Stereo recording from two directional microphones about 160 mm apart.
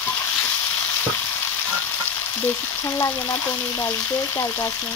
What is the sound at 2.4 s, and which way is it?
Speech, 15° left (ahead or behind).